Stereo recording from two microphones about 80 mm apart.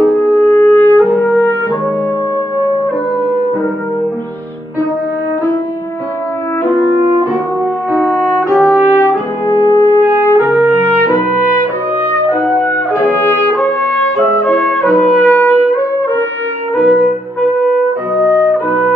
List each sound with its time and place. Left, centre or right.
0.1 s french horn: left
8.1 s music: centre
8.6 s brass instrument: left
9.6 s brass instrument: left
10.4 s trumpet: right
11.0 s music: left
13.2 s trumpet: left
15.2 s music: left